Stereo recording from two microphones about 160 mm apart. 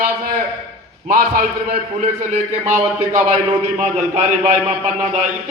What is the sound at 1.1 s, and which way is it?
Speech, 65° right (ahead or behind).